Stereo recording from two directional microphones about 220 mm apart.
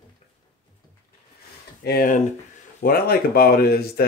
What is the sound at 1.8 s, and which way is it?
Speech, 40° left (ahead or behind).